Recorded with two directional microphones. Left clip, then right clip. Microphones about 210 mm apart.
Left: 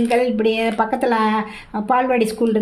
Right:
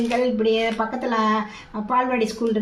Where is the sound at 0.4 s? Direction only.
50° left (ahead or behind).